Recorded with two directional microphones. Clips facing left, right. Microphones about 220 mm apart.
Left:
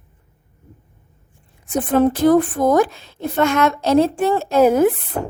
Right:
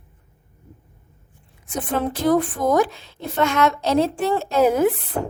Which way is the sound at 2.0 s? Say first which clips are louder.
Left 6 dB; 50° left (ahead or behind).